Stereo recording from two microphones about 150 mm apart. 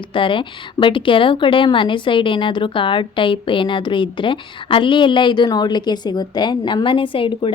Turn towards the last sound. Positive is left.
turn(degrees=35)  # may be behind; listen again after turning